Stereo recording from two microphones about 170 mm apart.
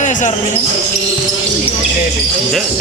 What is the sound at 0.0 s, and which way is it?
Basketball bounce, 45° left (ahead or behind).